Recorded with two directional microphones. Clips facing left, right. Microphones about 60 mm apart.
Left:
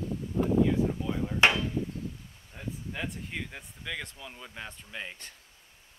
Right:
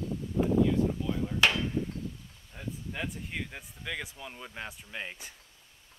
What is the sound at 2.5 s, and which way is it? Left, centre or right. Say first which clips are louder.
Speech: even; centre.